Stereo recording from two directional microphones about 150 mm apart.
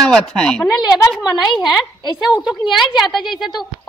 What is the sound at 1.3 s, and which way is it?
Speech, 30° left (ahead or behind).